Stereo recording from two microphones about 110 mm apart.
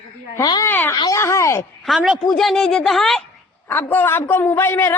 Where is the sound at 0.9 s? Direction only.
35° left (ahead or behind).